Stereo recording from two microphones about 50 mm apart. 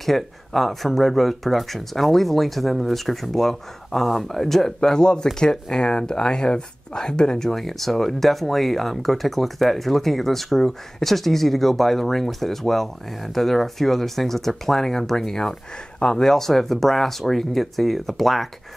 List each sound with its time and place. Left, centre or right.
0.0 s speech: centre
16.3 s speech: centre